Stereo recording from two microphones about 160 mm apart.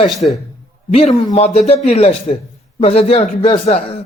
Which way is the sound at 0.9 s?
45° left (ahead or behind).